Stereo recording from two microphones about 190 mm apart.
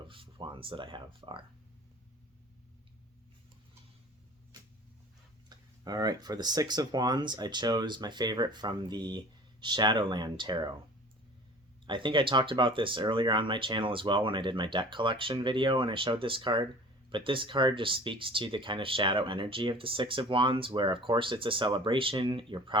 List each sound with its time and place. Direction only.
0.1 s speech: 25° right (ahead or behind)
5.5 s speech: 20° right (ahead or behind)
11.9 s speech: 25° right (ahead or behind)